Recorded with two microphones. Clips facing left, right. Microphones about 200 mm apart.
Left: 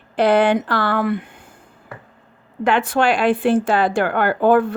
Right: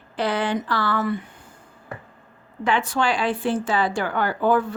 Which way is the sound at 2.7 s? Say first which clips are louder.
Left 5 dB; 60° left (ahead or behind).